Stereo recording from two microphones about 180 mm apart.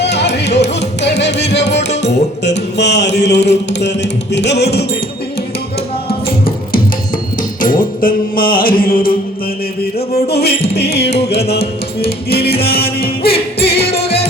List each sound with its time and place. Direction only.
0.0 s music: 70° left (ahead or behind)
6.1 s music: 55° left (ahead or behind)
10.2 s music: 65° left (ahead or behind)